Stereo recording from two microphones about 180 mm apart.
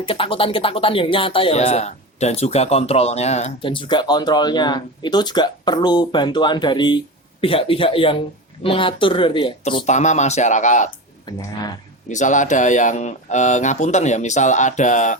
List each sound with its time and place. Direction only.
0.0 s speech: 30° left (ahead or behind)
9.8 s speech: 40° left (ahead or behind)
11.3 s speech: 20° left (ahead or behind)
12.0 s speech: 45° left (ahead or behind)